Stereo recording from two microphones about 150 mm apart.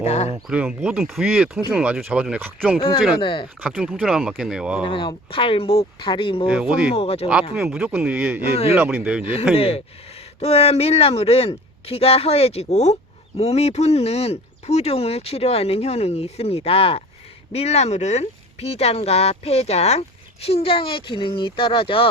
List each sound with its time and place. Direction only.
0.0 s speech: 45° left (ahead or behind)
0.4 s speech: 5° right (ahead or behind)
3.2 s speech: 30° left (ahead or behind)
3.6 s speech: 5° right (ahead or behind)
4.8 s speech: 35° left (ahead or behind)
6.5 s speech: 5° right (ahead or behind)
6.9 s speech: 40° left (ahead or behind)
7.5 s speech: 5° right (ahead or behind)
9.6 s speech: 40° left (ahead or behind)